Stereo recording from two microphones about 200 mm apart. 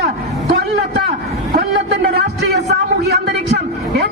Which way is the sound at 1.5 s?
50° right (ahead or behind).